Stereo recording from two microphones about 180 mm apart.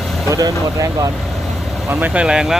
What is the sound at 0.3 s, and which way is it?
Speech, 20° right (ahead or behind).